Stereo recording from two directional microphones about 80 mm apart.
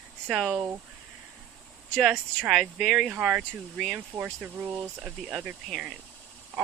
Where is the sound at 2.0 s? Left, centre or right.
Centre.